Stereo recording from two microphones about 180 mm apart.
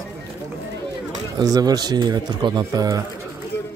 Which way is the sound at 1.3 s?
20° right (ahead or behind).